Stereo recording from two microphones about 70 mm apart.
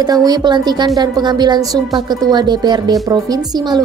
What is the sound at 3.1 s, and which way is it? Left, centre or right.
Speech, right.